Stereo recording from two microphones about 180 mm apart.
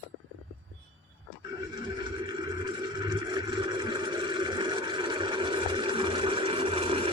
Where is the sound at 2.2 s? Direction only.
25° right (ahead or behind).